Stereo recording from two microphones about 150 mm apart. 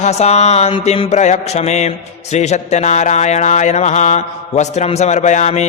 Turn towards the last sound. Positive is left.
turn(degrees=50)  # may be behind; listen again after turning